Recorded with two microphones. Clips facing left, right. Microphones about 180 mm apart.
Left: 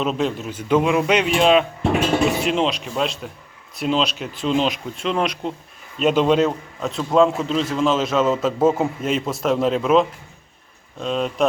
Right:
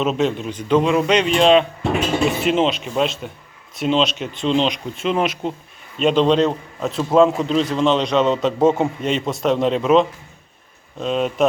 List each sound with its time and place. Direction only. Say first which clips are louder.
0.0 s a man's voice: right 3 dB; centre (ahead or behind)